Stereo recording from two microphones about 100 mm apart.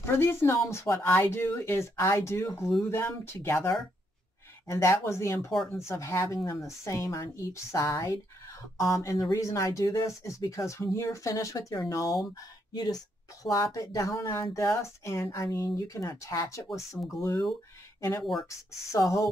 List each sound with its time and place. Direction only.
0.0 s speech: 25° left (ahead or behind)
18.9 s speech: 35° left (ahead or behind)